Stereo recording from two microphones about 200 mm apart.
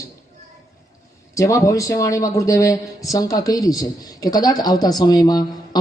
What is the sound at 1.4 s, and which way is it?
Speech, 15° left (ahead or behind).